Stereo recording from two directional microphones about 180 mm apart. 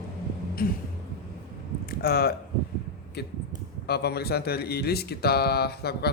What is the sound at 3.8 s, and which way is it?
Speech, 65° left (ahead or behind).